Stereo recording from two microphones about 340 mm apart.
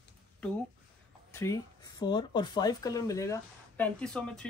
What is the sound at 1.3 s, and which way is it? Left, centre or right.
Speech, centre.